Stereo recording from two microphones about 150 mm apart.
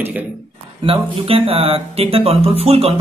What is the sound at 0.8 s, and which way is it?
A man's voice, 40° right (ahead or behind).